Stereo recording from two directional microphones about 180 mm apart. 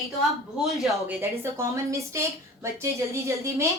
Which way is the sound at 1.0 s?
15° right (ahead or behind).